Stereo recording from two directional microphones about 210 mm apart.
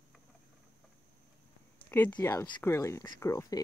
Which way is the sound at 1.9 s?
10° left (ahead or behind).